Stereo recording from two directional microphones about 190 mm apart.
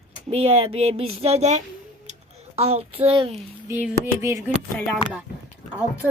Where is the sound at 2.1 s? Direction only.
35° right (ahead or behind).